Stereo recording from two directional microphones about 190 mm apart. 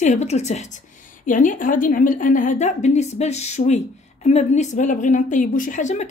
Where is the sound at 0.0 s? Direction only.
35° left (ahead or behind).